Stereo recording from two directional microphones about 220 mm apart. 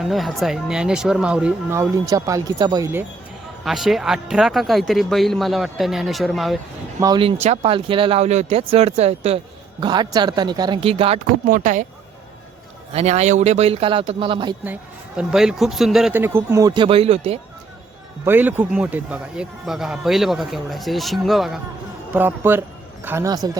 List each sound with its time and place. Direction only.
0.0 s a man's voice: centre (ahead or behind)
3.6 s a man's voice: centre (ahead or behind)
7.0 s speech: 20° right (ahead or behind)
12.9 s speech: 30° right (ahead or behind)
14.6 s speech: 5° right (ahead or behind); by 17.4 s 25° right (ahead or behind)
18.3 s a man's voice: 10° right (ahead or behind)